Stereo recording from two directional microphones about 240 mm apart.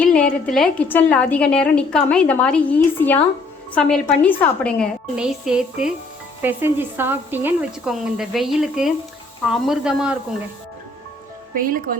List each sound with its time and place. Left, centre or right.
0.0 s a woman's voice: centre
11.5 s speech: right